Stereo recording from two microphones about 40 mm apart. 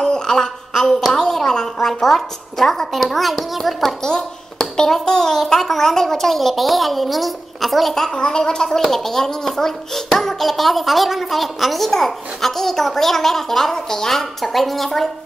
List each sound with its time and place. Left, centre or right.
0.0 s a sound: centre
0.7 s a child's voice: centre
4.7 s a child's voice: centre
7.9 s a woman's voice: centre